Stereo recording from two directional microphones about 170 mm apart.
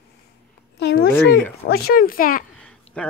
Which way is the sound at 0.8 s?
80° left.